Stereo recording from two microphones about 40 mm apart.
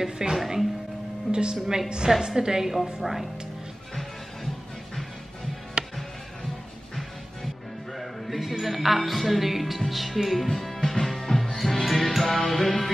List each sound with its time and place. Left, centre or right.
0.0 s a woman's voice: centre
1.3 s a woman's voice: right; by 3.3 s centre
5.8 s music: right
8.0 s speech: centre
11.1 s music: centre